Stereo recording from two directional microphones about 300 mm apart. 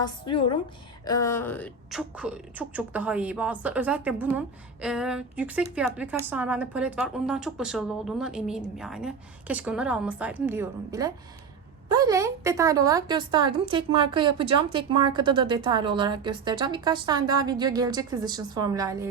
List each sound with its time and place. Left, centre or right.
0.0 s a woman's voice: centre